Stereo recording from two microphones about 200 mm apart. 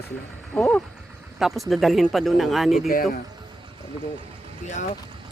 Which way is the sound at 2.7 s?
45° left (ahead or behind).